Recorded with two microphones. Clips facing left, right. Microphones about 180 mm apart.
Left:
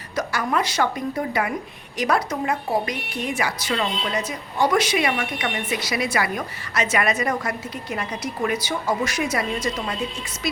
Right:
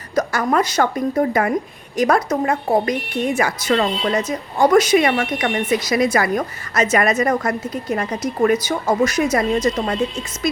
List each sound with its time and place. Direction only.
0.2 s speech: 45° right (ahead or behind)